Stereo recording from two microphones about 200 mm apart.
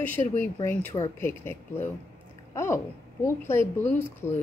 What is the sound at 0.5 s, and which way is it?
Speech, 20° left (ahead or behind).